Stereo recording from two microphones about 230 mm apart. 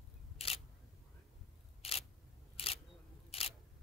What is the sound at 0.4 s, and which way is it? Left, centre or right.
Single-lens reflex camera, left.